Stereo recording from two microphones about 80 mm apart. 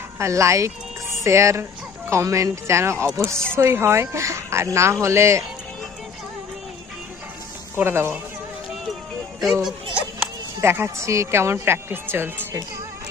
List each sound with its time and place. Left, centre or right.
0.2 s a woman's voice: right
7.8 s a woman's voice: right
9.5 s speech: centre
10.6 s a woman's voice: right